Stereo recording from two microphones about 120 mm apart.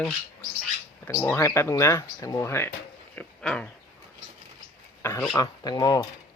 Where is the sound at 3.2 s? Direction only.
10° left (ahead or behind).